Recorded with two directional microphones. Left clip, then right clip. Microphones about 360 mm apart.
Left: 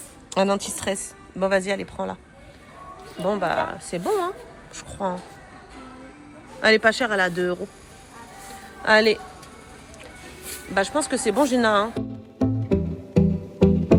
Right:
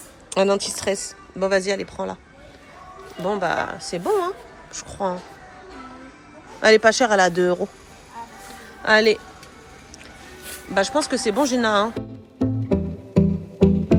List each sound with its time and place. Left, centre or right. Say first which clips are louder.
0.3 s speech: right 3 dB; centre
3.2 s a woman's voice: right 1 dB; centre
6.6 s speech: right 3 dB; centre
8.8 s speech: right 1 dB; centre
10.8 s speech: right 2 dB; centre
11.9 s music: even; left